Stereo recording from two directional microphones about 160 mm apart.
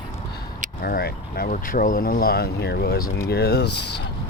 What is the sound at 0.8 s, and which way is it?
Speech, 70° left (ahead or behind).